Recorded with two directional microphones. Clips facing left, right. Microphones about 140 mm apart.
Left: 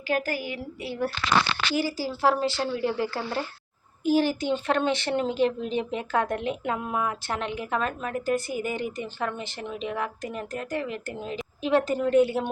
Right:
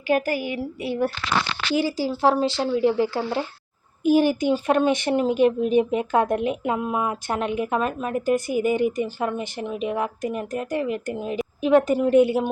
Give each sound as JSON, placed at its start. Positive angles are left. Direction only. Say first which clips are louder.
{"t": 0.1, "sound": "a woman's voice", "louder": "right 5 dB", "side_deg": -15}